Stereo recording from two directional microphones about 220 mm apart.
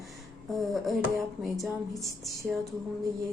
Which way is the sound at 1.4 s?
Centre (ahead or behind).